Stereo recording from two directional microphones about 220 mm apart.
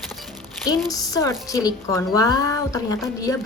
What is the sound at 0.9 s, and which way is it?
A woman's voice, 15° left (ahead or behind).